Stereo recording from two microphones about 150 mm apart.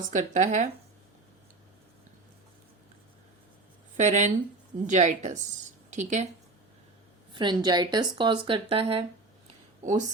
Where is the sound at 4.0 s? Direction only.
55° right (ahead or behind).